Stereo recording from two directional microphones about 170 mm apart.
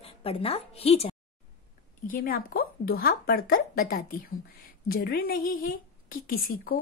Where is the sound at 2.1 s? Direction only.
55° left (ahead or behind).